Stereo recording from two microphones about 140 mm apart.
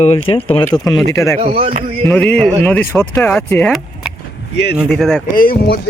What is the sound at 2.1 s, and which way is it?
Speech, 5° left (ahead or behind).